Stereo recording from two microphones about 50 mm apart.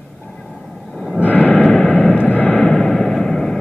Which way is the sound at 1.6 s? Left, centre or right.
Centre.